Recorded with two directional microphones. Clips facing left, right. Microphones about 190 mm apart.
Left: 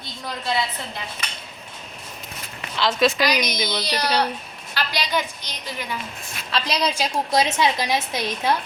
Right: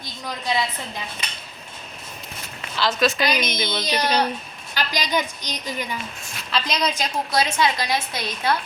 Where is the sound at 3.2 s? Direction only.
25° right (ahead or behind).